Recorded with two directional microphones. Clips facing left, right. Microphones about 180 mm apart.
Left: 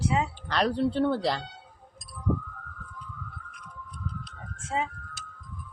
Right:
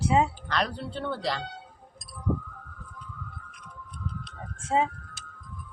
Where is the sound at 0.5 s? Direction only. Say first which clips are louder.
Left 10 dB; 35° left (ahead or behind).